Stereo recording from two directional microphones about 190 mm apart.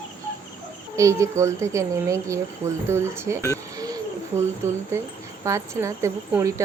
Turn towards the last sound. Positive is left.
turn(degrees=-15)  # may be behind; listen again after turning